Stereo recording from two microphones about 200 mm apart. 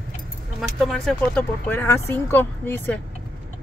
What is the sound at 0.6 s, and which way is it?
Speech, centre (ahead or behind).